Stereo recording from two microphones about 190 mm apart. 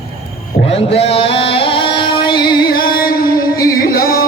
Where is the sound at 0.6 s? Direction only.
30° left (ahead or behind).